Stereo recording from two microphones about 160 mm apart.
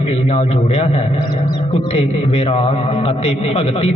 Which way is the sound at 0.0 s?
40° left (ahead or behind).